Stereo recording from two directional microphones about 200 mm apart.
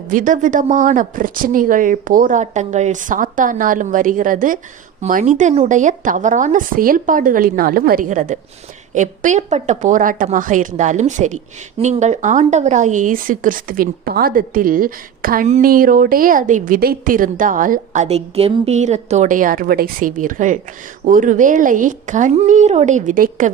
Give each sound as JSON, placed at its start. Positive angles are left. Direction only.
{"t": 0.1, "sound": "speech", "side_deg": -40}